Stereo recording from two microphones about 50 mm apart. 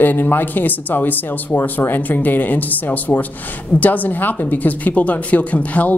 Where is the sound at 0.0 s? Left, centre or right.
Left.